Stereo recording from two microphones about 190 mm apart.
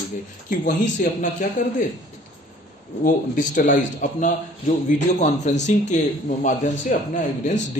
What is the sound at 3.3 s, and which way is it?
A man's voice, 45° left (ahead or behind).